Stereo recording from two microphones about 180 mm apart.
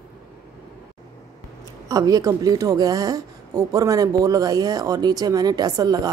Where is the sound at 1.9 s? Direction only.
20° right (ahead or behind).